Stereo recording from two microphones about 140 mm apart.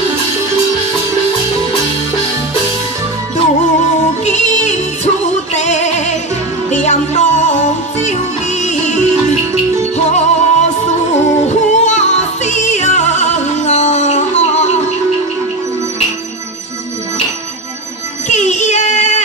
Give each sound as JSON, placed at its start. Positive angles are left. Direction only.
{"t": 4.2, "sound": "music", "side_deg": 55}
{"t": 18.3, "sound": "music", "side_deg": 55}